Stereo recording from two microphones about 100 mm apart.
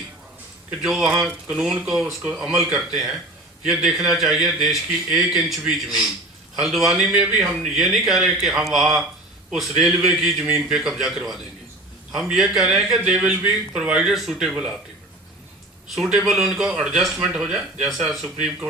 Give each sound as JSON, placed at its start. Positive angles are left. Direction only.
{"t": 0.8, "sound": "speech", "side_deg": -5}
{"t": 1.1, "sound": "speech", "side_deg": -15}
{"t": 1.5, "sound": "a man's voice", "side_deg": -5}
{"t": 12.1, "sound": "a man's voice", "side_deg": -5}
{"t": 16.0, "sound": "a man's voice", "side_deg": -5}